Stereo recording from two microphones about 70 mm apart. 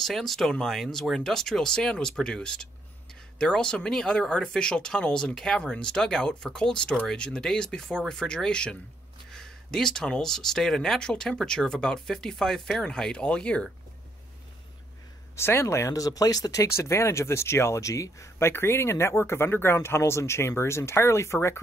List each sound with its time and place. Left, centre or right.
0.0 s speech: centre
15.3 s speech: left
16.6 s speech: left